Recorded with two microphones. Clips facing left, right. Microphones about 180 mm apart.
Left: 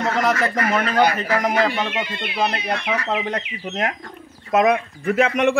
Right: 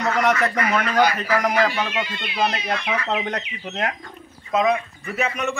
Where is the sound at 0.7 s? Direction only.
25° left (ahead or behind).